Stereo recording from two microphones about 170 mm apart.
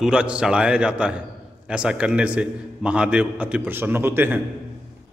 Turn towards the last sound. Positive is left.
turn(degrees=-15)  # may be behind; listen again after turning